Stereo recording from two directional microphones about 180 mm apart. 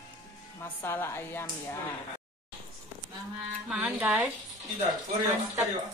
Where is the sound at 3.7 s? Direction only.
5° right (ahead or behind).